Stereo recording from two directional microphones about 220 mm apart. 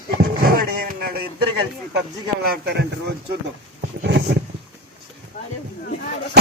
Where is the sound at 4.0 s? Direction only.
50° right (ahead or behind).